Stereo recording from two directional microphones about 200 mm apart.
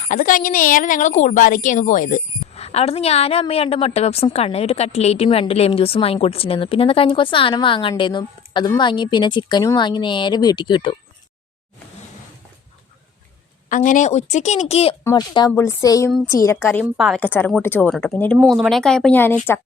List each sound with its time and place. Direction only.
0.0 s a woman's voice: 40° left (ahead or behind); by 10.9 s 25° left (ahead or behind)
13.7 s a woman's voice: 40° left (ahead or behind); by 19.4 s 10° left (ahead or behind)